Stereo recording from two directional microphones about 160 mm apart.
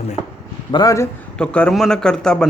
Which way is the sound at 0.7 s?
20° left (ahead or behind).